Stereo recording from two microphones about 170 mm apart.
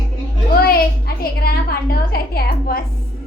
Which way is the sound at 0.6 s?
60° left (ahead or behind).